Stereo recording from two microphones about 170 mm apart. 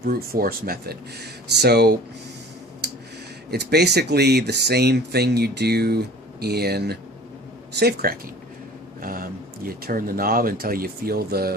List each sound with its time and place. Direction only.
0.0 s speech: 60° right (ahead or behind)
2.8 s a sound: 80° right
3.5 s speech: 75° right (ahead or behind)
9.0 s speech: 55° right (ahead or behind)